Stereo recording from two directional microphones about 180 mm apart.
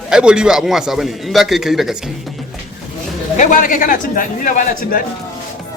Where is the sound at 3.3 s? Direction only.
45° left (ahead or behind).